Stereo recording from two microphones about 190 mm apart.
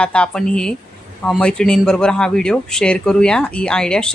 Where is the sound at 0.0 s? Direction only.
5° left (ahead or behind).